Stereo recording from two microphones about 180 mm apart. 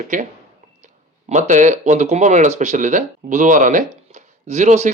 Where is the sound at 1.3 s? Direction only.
45° right (ahead or behind).